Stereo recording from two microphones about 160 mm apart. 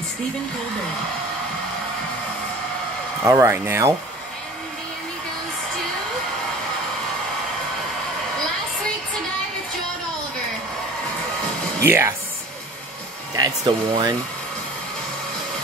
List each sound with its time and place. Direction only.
3.3 s speech: 20° right (ahead or behind)
11.8 s speech: 15° right (ahead or behind)
13.4 s speech: 25° right (ahead or behind)